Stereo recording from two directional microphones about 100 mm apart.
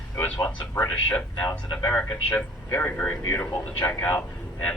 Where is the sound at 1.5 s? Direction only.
40° left (ahead or behind).